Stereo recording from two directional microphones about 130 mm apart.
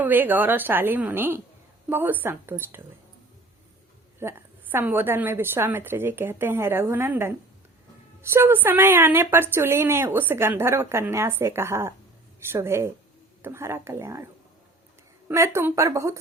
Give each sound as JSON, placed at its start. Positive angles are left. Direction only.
{"t": 0.0, "sound": "a woman's voice", "side_deg": -15}
{"t": 4.2, "sound": "a woman's voice", "side_deg": -20}
{"t": 15.3, "sound": "a woman's voice", "side_deg": -20}